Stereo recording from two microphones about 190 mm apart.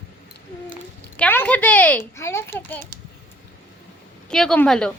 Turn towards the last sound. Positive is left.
turn(degrees=5)  # may be behind; listen again after turning